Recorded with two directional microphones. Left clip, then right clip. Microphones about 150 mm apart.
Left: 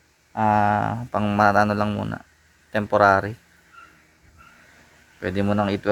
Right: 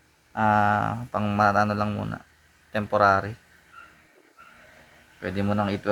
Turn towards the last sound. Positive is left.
turn(degrees=55)  # may be behind; listen again after turning